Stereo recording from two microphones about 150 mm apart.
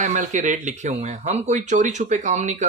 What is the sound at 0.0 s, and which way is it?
Speech, 55° right (ahead or behind).